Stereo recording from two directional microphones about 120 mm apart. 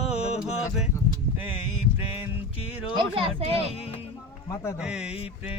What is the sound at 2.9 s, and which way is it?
Speech, 50° right (ahead or behind).